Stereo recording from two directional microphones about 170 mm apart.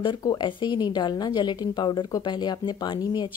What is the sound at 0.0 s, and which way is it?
A woman's voice, 25° left (ahead or behind).